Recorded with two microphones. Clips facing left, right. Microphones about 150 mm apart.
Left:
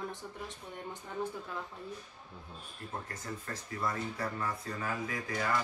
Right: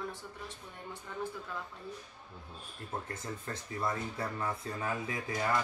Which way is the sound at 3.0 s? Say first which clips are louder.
Right 1 dB; 25° right (ahead or behind).